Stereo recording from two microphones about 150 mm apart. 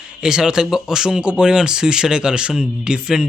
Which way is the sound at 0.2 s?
5° right (ahead or behind).